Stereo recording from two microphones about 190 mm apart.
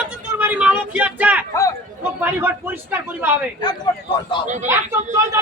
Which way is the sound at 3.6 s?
20° left (ahead or behind).